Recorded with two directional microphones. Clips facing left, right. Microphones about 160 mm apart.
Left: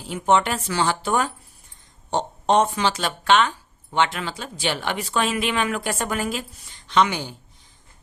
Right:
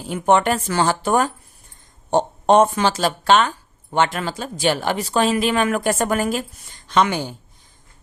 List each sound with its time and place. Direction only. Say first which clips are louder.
0.1 s speech: right 3 dB; 50° right (ahead or behind)